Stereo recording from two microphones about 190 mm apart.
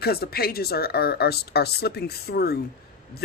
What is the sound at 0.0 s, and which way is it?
A woman's voice, 55° left (ahead or behind).